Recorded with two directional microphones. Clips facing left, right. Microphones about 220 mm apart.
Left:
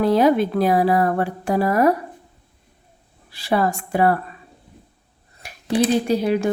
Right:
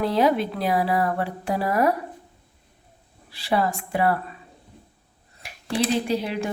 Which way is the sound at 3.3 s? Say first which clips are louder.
Left 3 dB; 45° left (ahead or behind).